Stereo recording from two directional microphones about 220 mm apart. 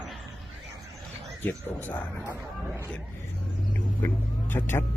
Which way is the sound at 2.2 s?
10° right (ahead or behind).